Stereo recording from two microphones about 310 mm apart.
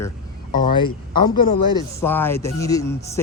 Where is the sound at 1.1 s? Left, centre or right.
Left.